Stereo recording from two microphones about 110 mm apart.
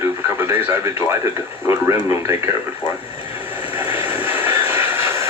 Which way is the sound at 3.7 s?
20° right (ahead or behind).